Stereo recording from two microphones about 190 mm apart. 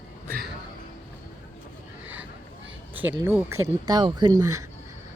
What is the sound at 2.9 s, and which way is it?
Speech, 10° right (ahead or behind).